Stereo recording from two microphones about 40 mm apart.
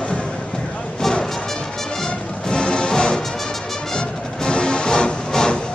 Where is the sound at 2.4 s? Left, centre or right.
Left.